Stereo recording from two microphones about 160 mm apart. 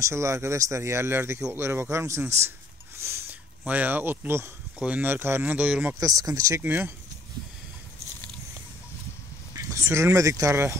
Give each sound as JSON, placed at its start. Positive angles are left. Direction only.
{"t": 0.0, "sound": "speech", "side_deg": -20}
{"t": 3.0, "sound": "a sound", "side_deg": -15}
{"t": 4.7, "sound": "speech", "side_deg": -10}
{"t": 5.9, "sound": "speech", "side_deg": -20}
{"t": 9.5, "sound": "speech", "side_deg": -20}